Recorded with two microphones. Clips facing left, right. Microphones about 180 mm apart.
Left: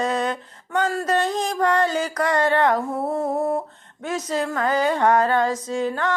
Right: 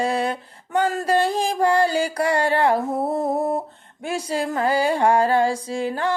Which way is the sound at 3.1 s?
15° right (ahead or behind).